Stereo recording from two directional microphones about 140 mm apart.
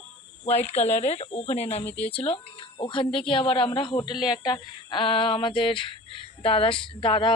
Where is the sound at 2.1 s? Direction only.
40° left (ahead or behind).